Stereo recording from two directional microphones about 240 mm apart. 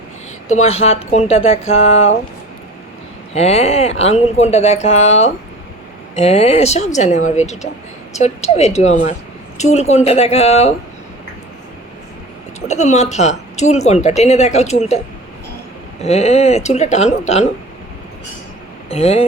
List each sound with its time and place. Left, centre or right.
0.4 s a woman's voice: left
3.3 s a woman's voice: left
12.5 s a woman's voice: left
18.9 s a woman's voice: left